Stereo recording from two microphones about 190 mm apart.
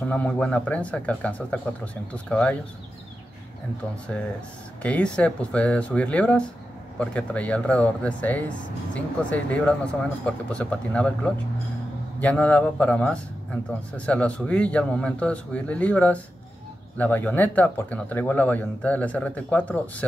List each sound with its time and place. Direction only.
0.0 s a man's voice: 5° left (ahead or behind)
4.8 s a man's voice: 5° left (ahead or behind)